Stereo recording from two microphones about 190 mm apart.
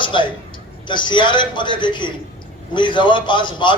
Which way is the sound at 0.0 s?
25° left (ahead or behind).